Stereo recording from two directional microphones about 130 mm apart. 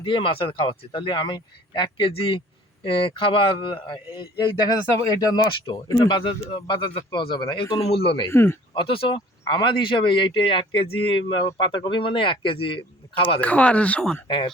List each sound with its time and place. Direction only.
0.0 s speech: 40° left (ahead or behind)
7.9 s speech: 45° left (ahead or behind)
8.3 s a man's voice: 20° left (ahead or behind)
8.7 s speech: 40° left (ahead or behind)
13.4 s speech: 10° left (ahead or behind)
14.3 s speech: 35° left (ahead or behind)